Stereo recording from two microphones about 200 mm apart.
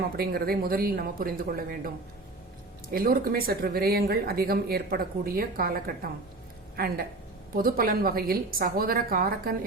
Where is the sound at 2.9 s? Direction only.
45° right (ahead or behind).